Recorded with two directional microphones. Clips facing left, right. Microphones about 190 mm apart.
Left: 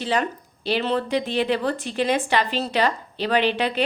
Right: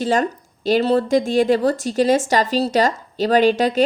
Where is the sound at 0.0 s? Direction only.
45° right (ahead or behind).